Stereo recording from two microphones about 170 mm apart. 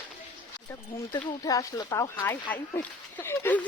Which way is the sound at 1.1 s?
20° left (ahead or behind).